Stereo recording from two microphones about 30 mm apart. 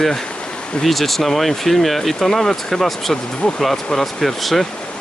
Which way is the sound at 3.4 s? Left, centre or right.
Left.